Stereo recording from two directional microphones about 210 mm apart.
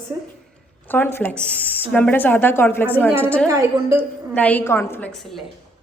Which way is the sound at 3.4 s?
15° right (ahead or behind).